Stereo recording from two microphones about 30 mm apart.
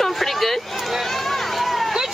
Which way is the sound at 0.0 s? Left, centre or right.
Centre.